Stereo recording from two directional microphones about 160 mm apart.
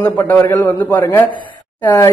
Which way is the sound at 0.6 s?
15° left (ahead or behind).